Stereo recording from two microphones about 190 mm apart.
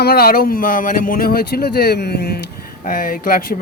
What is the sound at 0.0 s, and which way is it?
Speech, 55° left (ahead or behind).